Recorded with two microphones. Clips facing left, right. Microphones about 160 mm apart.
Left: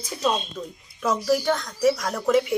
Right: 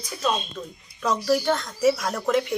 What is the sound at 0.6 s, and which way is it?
Speech, 10° left (ahead or behind).